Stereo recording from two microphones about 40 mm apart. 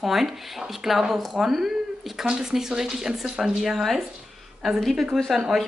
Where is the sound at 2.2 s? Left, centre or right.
Centre.